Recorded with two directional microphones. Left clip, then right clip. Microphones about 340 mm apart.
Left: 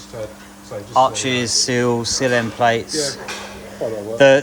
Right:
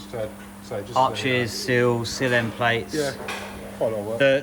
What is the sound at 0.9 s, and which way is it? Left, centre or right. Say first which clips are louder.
Speech: left 5 dB; centre.